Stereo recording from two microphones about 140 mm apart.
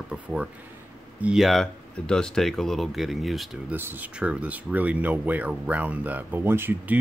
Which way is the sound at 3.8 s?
15° right (ahead or behind).